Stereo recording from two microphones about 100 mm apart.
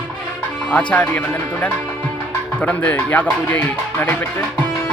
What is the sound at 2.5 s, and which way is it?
Speech, 15° left (ahead or behind).